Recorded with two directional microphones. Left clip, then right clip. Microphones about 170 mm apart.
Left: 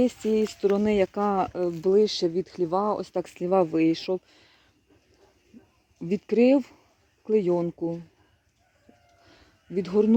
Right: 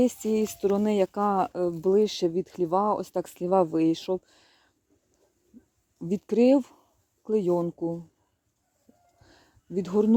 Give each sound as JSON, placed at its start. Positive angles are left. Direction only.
{"t": 0.0, "sound": "speech", "side_deg": -20}
{"t": 6.0, "sound": "speech", "side_deg": -15}
{"t": 9.2, "sound": "a sound", "side_deg": -20}